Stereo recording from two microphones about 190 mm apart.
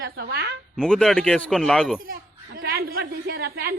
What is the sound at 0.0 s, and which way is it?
Speech, 60° right (ahead or behind).